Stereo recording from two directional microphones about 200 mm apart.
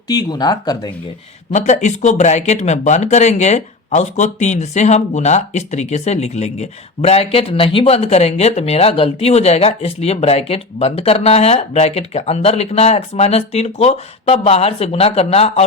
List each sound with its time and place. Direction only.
0.1 s speech: 20° left (ahead or behind)
1.5 s speech: 35° left (ahead or behind)